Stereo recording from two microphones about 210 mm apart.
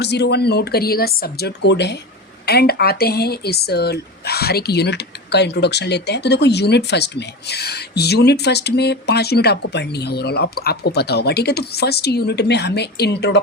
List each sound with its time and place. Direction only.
0.0 s speech: 55° left (ahead or behind)